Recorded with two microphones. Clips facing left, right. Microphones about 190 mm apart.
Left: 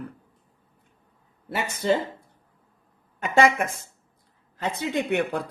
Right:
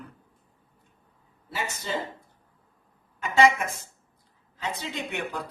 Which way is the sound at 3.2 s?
55° left (ahead or behind).